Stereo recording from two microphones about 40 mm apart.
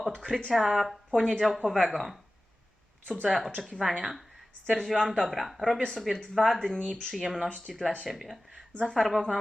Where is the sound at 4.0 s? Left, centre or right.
Centre.